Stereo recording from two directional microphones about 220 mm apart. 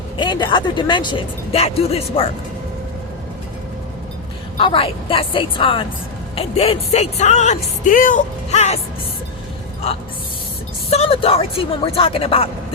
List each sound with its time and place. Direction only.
0.2 s speech: 20° left (ahead or behind)
4.5 s speech: 25° left (ahead or behind)
10.8 s speech: 30° left (ahead or behind)